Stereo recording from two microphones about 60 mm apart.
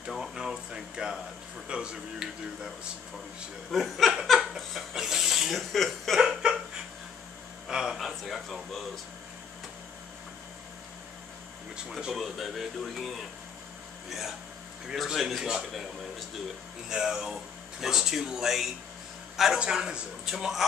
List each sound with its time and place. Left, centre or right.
0.2 s a sound: centre
1.7 s speech: centre
3.7 s speech: centre
4.3 s laughter: centre
6.1 s laughter: centre
7.6 s a sound: centre
8.1 s a sound: centre
12.2 s speech: centre
15.0 s speech: centre
16.9 s a man's voice: centre